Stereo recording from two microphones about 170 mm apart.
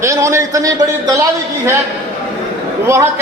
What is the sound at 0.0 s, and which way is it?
A man's voice, 15° right (ahead or behind).